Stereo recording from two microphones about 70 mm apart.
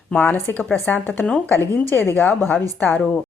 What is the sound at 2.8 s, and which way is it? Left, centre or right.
Speech, left.